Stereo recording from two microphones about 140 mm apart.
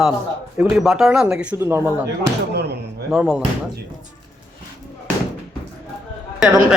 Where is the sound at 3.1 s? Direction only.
5° right (ahead or behind).